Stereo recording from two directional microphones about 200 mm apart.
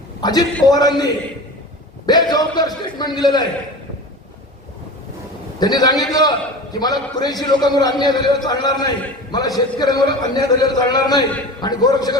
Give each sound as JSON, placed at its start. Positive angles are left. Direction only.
{"t": 0.2, "sound": "a man's voice", "side_deg": 20}
{"t": 5.5, "sound": "a man's voice", "side_deg": 20}